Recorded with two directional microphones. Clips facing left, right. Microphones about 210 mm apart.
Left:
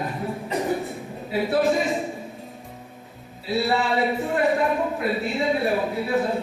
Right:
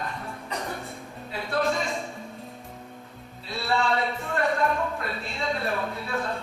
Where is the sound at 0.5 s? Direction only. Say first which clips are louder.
Left 9 dB; 20° left (ahead or behind).